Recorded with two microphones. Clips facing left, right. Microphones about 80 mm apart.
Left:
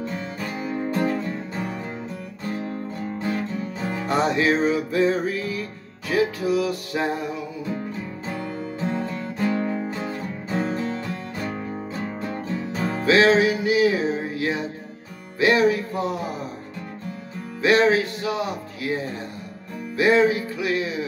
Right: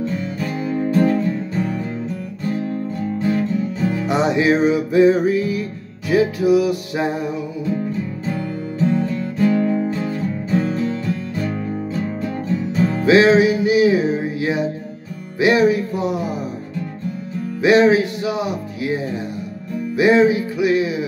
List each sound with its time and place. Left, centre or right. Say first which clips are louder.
0.4 s music: right 5 dB; centre
3.8 s music: right 5 dB; left
4.1 s music: right 3 dB; centre
8.3 s music: right 2 dB; left
12.7 s music: right 7 dB; left
13.0 s music: right 4 dB; centre
17.6 s speech: right 5 dB; centre
20.0 s music: right 4 dB; centre